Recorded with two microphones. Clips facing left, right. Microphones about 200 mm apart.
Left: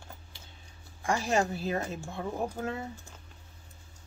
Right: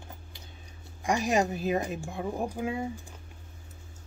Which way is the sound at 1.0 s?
15° right (ahead or behind).